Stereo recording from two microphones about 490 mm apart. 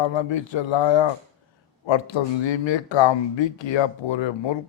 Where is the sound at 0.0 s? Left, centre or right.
Left.